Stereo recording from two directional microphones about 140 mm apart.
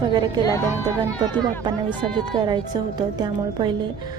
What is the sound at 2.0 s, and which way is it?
A woman's voice, 30° right (ahead or behind).